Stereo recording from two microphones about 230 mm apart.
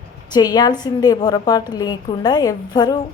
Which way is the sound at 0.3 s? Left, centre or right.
Centre.